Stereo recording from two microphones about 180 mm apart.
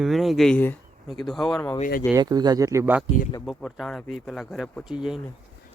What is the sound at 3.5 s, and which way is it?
Speech, centre (ahead or behind).